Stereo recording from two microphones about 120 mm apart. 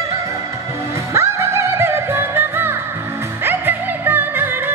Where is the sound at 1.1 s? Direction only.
25° right (ahead or behind).